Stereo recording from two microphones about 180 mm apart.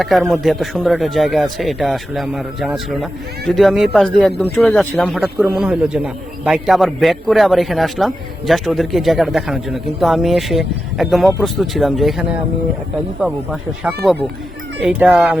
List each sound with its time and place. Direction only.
0.0 s a man's voice: centre (ahead or behind)
13.2 s a man's voice: centre (ahead or behind)